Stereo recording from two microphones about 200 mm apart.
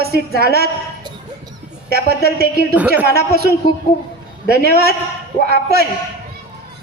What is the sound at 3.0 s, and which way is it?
A woman's voice, 50° right (ahead or behind).